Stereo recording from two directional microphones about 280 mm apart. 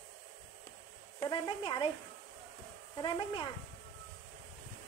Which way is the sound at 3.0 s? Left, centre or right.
Centre.